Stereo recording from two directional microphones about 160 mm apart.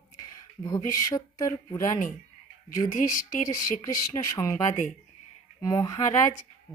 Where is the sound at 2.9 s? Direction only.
55° left (ahead or behind).